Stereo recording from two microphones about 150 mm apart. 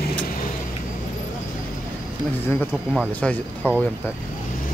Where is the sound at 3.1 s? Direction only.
10° left (ahead or behind).